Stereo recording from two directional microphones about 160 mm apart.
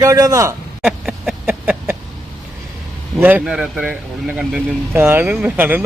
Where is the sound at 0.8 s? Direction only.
Centre (ahead or behind).